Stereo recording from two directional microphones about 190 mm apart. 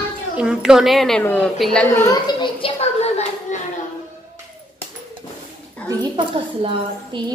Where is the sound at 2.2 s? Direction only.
25° left (ahead or behind).